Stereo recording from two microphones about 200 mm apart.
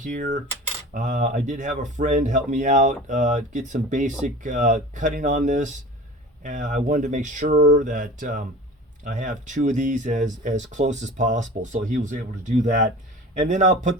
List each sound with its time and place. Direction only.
0.0 s speech: 40° right (ahead or behind)